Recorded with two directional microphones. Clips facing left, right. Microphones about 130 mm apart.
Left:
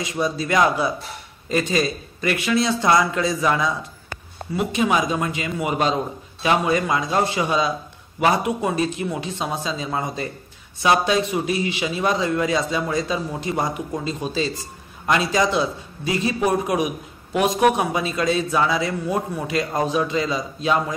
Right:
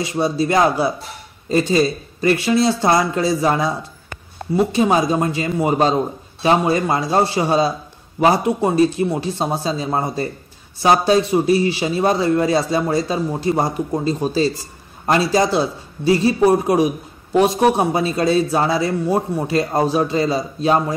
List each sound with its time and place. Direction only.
0.0 s a man's voice: 30° right (ahead or behind)